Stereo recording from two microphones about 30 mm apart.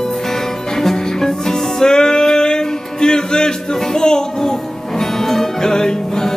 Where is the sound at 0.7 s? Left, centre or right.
Centre.